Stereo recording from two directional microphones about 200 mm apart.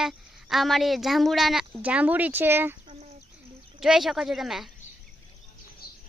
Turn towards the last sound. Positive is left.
turn(degrees=50)  # may be behind; listen again after turning